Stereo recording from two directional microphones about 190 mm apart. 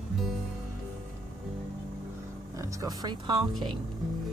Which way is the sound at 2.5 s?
15° right (ahead or behind).